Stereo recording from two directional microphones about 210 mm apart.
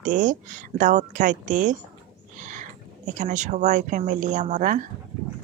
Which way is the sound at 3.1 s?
35° right (ahead or behind).